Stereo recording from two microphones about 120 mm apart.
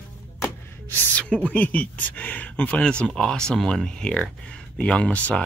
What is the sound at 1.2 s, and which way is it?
Speech, 10° left (ahead or behind).